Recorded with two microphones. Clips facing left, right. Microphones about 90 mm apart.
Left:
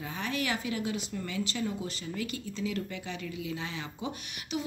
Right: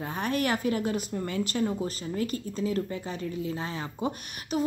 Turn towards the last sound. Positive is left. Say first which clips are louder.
# right 4 dB
turn(degrees=-45)  # may be behind; listen again after turning